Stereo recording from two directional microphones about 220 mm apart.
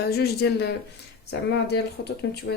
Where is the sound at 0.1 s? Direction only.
45° left (ahead or behind).